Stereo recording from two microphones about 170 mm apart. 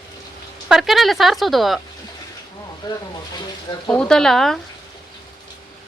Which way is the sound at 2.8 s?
25° left (ahead or behind).